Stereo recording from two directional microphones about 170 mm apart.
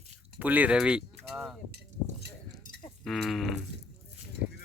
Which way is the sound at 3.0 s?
Centre (ahead or behind).